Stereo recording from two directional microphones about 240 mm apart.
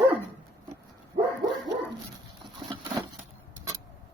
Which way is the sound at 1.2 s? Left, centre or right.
Right.